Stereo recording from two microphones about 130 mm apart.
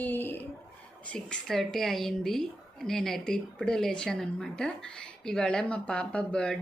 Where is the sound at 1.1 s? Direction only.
5° left (ahead or behind).